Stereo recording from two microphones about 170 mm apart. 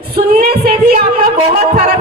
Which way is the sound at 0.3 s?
60° right (ahead or behind).